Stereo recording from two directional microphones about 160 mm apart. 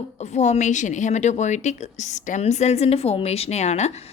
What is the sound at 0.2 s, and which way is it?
A woman's voice, 45° left (ahead or behind).